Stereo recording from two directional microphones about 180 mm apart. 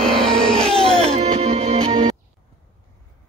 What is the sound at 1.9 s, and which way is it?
Music, 25° right (ahead or behind).